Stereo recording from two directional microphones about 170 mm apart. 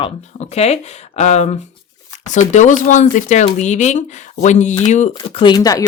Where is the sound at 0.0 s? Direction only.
40° left (ahead or behind).